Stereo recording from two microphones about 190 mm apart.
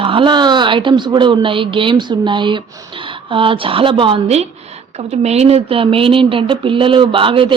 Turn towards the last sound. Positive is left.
turn(degrees=-25)  # may be behind; listen again after turning